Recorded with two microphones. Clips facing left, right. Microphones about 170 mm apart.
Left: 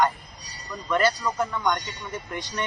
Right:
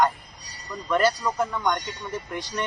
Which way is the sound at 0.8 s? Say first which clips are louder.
Right 1 dB; 5° right (ahead or behind).